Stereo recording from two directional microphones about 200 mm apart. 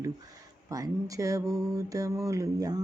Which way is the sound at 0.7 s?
15° right (ahead or behind).